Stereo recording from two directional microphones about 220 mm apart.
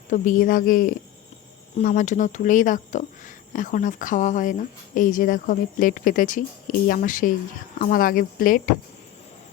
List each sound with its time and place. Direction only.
0.1 s speech: 35° left (ahead or behind)